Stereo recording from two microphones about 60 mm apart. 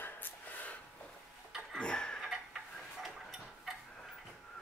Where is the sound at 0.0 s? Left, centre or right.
Left.